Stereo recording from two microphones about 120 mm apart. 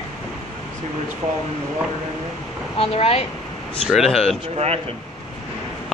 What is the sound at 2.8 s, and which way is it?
Speech, 55° left (ahead or behind).